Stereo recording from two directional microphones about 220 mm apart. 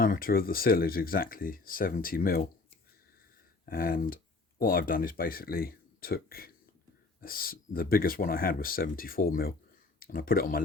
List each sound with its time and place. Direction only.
0.0 s speech: 40° left (ahead or behind)
3.7 s speech: 40° left (ahead or behind)